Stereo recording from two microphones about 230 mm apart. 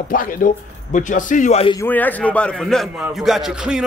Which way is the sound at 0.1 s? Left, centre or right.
Left.